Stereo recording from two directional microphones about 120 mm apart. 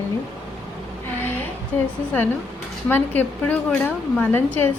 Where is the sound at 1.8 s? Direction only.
15° left (ahead or behind).